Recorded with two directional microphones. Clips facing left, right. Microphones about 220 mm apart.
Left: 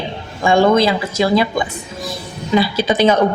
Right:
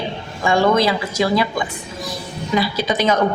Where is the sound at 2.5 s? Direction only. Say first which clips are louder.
Left 4 dB; 30° left (ahead or behind).